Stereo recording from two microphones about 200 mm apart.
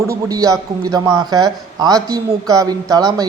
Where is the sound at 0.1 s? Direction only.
15° right (ahead or behind).